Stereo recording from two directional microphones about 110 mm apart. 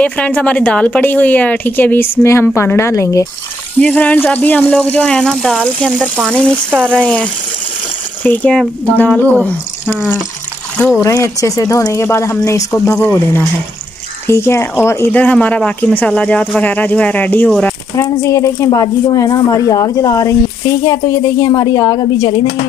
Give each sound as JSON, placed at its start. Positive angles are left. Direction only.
{"t": 0.0, "sound": "a woman's voice", "side_deg": 10}
{"t": 3.8, "sound": "a woman's voice", "side_deg": 15}
{"t": 6.9, "sound": "a woman's voice", "side_deg": 10}
{"t": 14.2, "sound": "speech", "side_deg": 25}
{"t": 15.1, "sound": "a woman's voice", "side_deg": 10}
{"t": 17.9, "sound": "speech", "side_deg": 30}